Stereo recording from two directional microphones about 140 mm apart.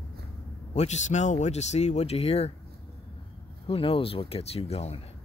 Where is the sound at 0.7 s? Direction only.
55° left (ahead or behind).